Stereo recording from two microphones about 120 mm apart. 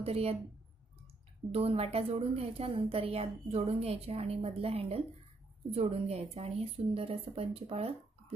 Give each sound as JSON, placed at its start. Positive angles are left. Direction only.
{"t": 0.0, "sound": "a woman's voice", "side_deg": -55}
{"t": 1.5, "sound": "a woman's voice", "side_deg": -55}